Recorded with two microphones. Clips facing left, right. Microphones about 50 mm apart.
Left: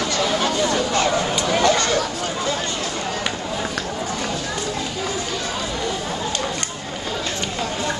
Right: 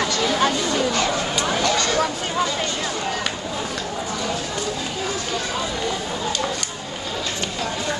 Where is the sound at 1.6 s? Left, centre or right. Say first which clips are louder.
Left 5 dB; left.